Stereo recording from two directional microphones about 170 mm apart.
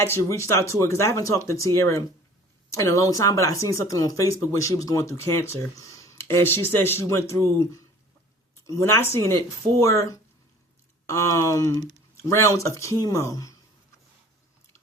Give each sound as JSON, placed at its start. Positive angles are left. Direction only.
{"t": 0.0, "sound": "speech", "side_deg": 15}